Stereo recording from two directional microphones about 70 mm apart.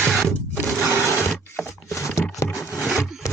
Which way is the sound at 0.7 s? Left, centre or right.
Right.